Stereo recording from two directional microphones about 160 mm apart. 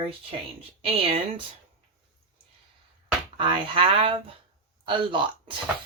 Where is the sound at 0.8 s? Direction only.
35° right (ahead or behind).